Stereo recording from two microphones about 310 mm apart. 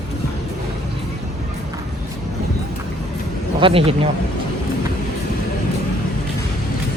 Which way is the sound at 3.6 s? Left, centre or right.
Centre.